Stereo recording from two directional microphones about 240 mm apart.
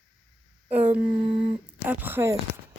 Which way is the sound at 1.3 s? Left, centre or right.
Right.